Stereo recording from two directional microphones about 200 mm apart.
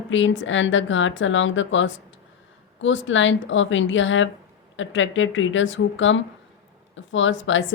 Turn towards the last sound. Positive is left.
turn(degrees=70)  # may be behind; listen again after turning